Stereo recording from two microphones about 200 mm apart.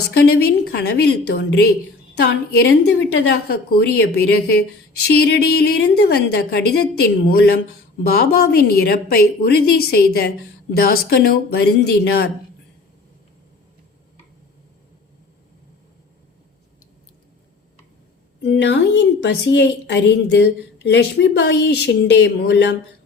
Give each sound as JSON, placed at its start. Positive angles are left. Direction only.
{"t": 0.2, "sound": "a woman's voice", "side_deg": 50}
{"t": 18.4, "sound": "a woman's voice", "side_deg": 60}